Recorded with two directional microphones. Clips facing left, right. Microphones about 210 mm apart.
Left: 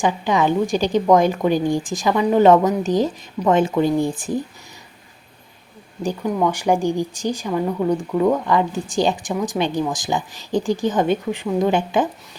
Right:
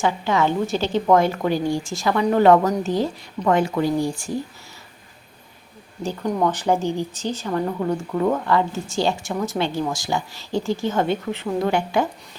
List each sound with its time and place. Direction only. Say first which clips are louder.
0.0 s speech: left 2 dB; 15° left (ahead or behind)
6.2 s speech: left 1 dB; 5° left (ahead or behind)
6.5 s speech: left 2 dB; 15° left (ahead or behind)